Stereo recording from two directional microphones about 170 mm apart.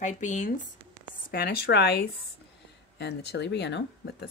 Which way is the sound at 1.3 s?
65° left (ahead or behind).